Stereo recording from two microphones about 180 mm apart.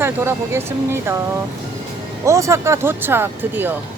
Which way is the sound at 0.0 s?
15° right (ahead or behind).